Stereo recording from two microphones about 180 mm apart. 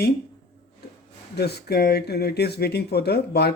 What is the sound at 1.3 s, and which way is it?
Speech, 65° left (ahead or behind).